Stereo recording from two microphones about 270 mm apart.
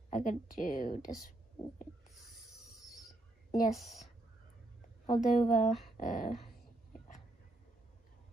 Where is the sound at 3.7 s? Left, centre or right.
Centre.